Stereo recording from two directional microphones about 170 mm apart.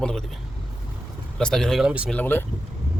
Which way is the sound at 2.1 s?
10° left (ahead or behind).